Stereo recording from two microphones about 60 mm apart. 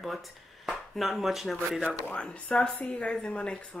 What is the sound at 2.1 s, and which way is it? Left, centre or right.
A woman's voice, centre.